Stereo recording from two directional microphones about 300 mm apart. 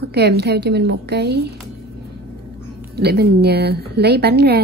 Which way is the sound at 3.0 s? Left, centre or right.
Right.